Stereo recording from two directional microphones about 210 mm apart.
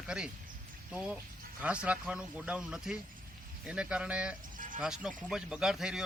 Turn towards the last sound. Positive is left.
turn(degrees=0)  # may be behind; listen again after turning